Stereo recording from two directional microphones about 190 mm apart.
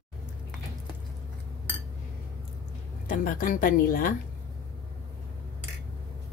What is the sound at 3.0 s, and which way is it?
A woman's voice, 45° left (ahead or behind).